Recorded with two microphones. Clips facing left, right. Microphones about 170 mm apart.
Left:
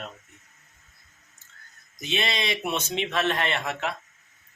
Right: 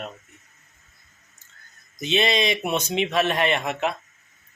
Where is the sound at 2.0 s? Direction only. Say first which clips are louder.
Right 6 dB; 20° right (ahead or behind).